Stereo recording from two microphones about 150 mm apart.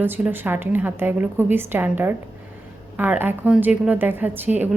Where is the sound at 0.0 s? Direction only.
15° right (ahead or behind).